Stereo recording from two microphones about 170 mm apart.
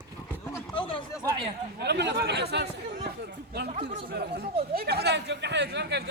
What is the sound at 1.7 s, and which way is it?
Chatter, 85° right.